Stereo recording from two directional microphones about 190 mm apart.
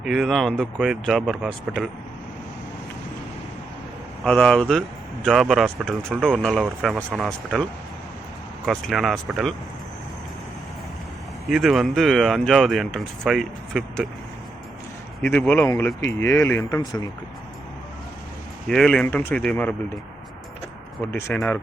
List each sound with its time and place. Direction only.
0.0 s speech: centre (ahead or behind)
4.2 s speech: 5° left (ahead or behind)
11.4 s speech: centre (ahead or behind)
15.2 s speech: 10° left (ahead or behind)
18.7 s speech: 5° left (ahead or behind)
21.1 s speech: 15° left (ahead or behind)